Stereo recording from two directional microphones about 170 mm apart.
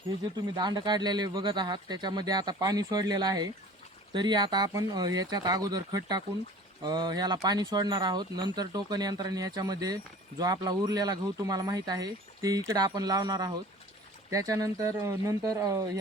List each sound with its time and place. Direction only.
0.5 s speech: 25° right (ahead or behind)